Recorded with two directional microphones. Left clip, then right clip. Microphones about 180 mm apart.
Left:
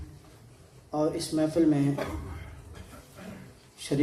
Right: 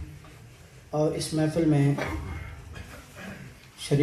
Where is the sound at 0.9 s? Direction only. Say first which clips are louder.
Right 1 dB; 30° left (ahead or behind).